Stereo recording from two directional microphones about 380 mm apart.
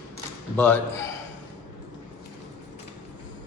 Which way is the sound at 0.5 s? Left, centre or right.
Centre.